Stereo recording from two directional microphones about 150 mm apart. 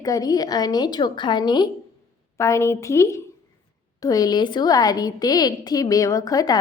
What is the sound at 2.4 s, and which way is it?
A woman's voice, 20° left (ahead or behind).